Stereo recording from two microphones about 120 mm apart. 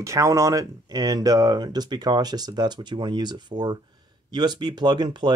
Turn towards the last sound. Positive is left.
turn(degrees=-40)  # may be behind; listen again after turning